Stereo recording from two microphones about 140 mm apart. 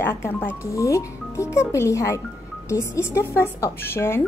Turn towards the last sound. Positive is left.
turn(degrees=15)  # may be behind; listen again after turning